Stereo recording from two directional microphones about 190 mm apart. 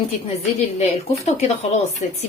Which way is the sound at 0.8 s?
35° left (ahead or behind).